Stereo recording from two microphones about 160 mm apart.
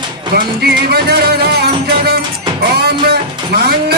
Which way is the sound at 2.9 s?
80° right.